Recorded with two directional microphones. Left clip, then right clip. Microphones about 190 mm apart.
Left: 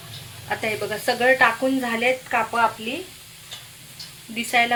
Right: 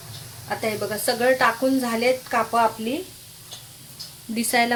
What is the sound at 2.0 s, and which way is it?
Speech, 15° right (ahead or behind).